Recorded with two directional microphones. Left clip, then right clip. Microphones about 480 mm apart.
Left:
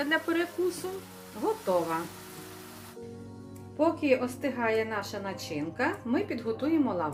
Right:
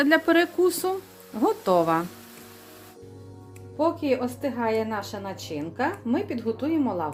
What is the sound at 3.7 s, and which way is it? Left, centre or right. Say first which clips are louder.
A woman's voice: right 2 dB; centre.